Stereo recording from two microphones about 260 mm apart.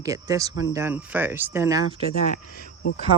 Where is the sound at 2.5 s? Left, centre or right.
Left.